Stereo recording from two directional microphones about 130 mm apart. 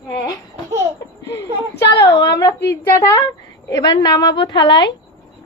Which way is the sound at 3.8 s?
30° left (ahead or behind).